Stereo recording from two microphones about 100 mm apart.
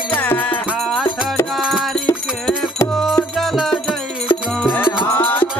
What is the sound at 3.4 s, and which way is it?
Music, centre (ahead or behind).